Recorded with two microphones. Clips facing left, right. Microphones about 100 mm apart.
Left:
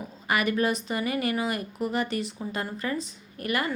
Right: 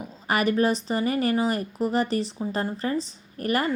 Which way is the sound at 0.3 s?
35° right (ahead or behind).